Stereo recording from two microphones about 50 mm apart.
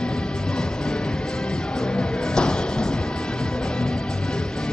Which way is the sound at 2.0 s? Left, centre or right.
Centre.